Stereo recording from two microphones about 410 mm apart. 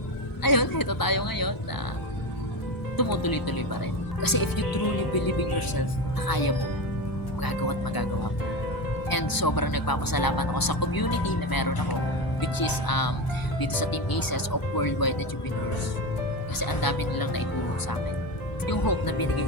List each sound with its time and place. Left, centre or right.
0.4 s a sound: left
3.0 s speech: left
9.0 s speech: left
16.6 s speech: left
18.6 s speech: left